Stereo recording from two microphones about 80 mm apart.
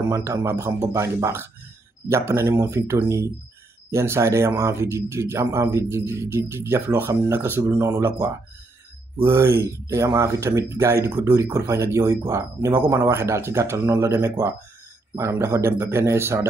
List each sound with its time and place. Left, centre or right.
0.1 s speech: right
11.1 s speech: right
15.1 s speech: right